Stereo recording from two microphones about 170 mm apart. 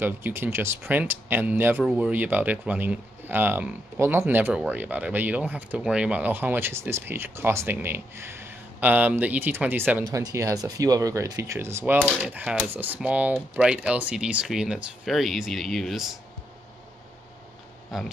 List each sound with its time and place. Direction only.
0.0 s speech: 15° right (ahead or behind)
17.9 s speech: centre (ahead or behind)